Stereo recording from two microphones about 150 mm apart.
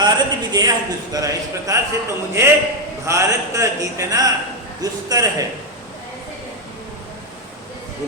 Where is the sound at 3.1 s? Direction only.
20° right (ahead or behind).